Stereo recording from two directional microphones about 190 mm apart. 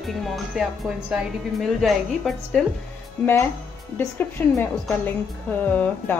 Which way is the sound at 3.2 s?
10° left (ahead or behind).